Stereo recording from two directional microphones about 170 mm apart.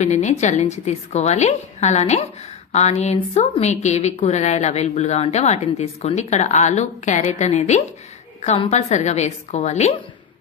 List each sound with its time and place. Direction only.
0.0 s a woman's voice: 45° left (ahead or behind)